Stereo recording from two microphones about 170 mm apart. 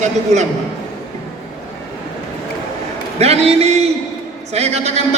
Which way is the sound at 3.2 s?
40° right (ahead or behind).